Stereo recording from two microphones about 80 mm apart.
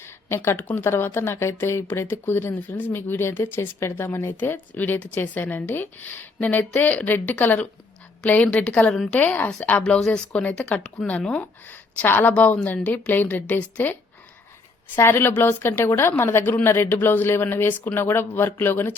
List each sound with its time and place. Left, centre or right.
0.0 s a sound: left
0.8 s a woman's voice: left; by 11.4 s centre
11.7 s a woman's voice: left
14.9 s a woman's voice: left